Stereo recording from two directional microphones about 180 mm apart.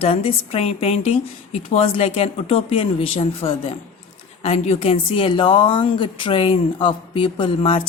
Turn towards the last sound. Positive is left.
turn(degrees=30)  # may be behind; listen again after turning